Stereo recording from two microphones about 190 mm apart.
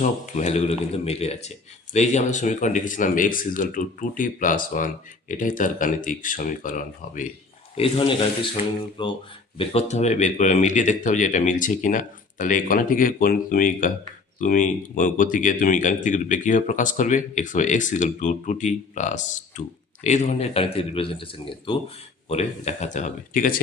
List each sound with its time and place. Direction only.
0.0 s speech: 40° left (ahead or behind)
7.8 s speech: 25° left (ahead or behind); by 23.6 s 45° left (ahead or behind)